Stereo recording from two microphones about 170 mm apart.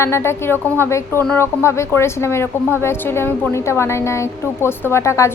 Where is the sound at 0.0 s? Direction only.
15° left (ahead or behind).